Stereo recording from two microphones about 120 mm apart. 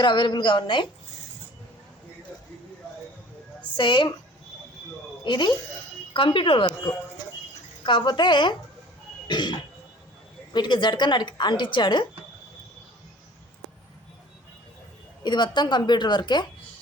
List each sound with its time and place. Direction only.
0.0 s a woman's voice: 40° left (ahead or behind)
3.8 s a woman's voice: 40° left (ahead or behind)
5.2 s a woman's voice: 40° left (ahead or behind)
15.2 s a woman's voice: 40° left (ahead or behind)